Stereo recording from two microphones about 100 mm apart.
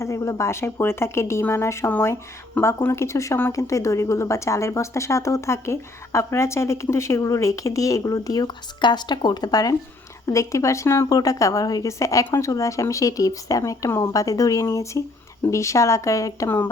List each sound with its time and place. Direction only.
0.0 s speech: 30° left (ahead or behind)
11.1 s speech: 35° left (ahead or behind)